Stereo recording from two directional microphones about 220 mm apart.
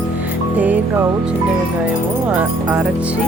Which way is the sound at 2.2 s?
5° right (ahead or behind).